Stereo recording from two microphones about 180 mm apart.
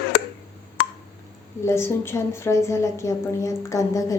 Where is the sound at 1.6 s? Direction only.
15° left (ahead or behind).